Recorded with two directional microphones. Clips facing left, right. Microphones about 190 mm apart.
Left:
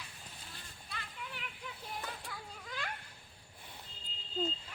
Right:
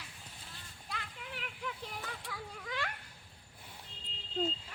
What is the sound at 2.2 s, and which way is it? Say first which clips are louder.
Children playing: right 3 dB; 70° right (ahead or behind).